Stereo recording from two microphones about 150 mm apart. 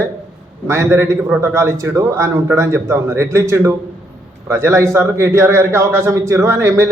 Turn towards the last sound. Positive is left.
turn(degrees=-20)  # may be behind; listen again after turning